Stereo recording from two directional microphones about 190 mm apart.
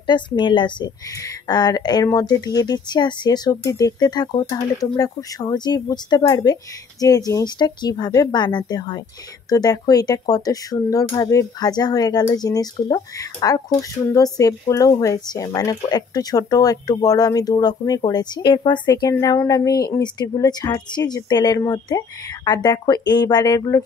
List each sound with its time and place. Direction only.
0.0 s speech: 25° left (ahead or behind)